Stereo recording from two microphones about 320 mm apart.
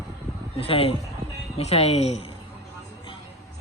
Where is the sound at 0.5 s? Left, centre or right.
Centre.